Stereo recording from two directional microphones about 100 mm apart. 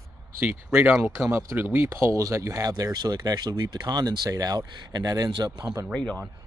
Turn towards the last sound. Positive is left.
turn(degrees=10)  # may be behind; listen again after turning